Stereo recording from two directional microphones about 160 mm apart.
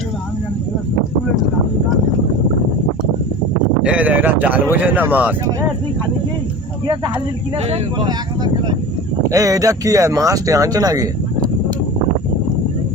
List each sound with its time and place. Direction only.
3.8 s speech: 10° right (ahead or behind)
6.8 s speech: 30° right (ahead or behind)